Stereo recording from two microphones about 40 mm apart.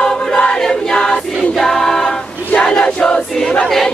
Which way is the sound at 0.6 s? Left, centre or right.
Centre.